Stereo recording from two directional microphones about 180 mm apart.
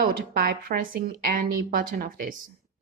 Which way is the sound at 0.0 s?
55° right (ahead or behind).